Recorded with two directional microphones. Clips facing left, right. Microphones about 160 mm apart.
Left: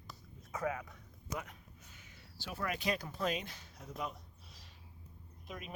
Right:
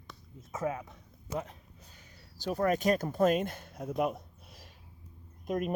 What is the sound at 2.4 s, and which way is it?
Speech, 40° right (ahead or behind).